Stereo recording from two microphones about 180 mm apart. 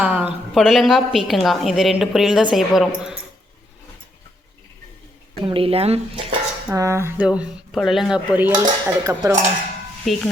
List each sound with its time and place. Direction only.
0.0 s a sound: 5° right (ahead or behind)
0.5 s a woman's voice: centre (ahead or behind)
5.4 s speech: 30° right (ahead or behind)
6.7 s speech: 15° right (ahead or behind)
8.5 s dishes: 20° right (ahead or behind)
10.1 s a woman's voice: centre (ahead or behind)